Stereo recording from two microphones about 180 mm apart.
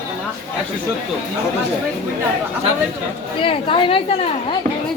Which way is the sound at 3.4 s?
30° left (ahead or behind).